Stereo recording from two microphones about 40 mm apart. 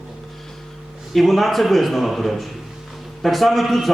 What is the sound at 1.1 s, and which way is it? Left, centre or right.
A man's voice, centre.